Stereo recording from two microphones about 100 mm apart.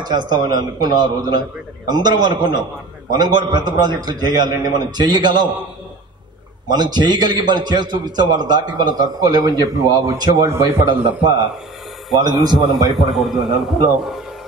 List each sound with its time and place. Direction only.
0.0 s a man's voice: 45° right (ahead or behind)
6.7 s a man's voice: 45° right (ahead or behind)
11.1 s a man's voice: 45° right (ahead or behind)
12.9 s a man's voice: centre (ahead or behind)